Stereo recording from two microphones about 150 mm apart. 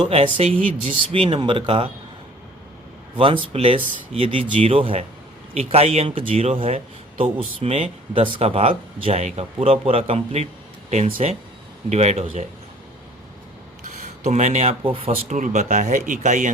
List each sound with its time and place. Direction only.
0.0 s speech: 40° right (ahead or behind)
3.2 s speech: 35° right (ahead or behind)
13.8 s speech: 50° right (ahead or behind)
15.4 s speech: 55° right (ahead or behind)